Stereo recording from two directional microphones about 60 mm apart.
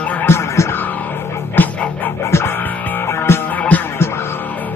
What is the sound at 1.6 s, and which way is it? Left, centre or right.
Music, left.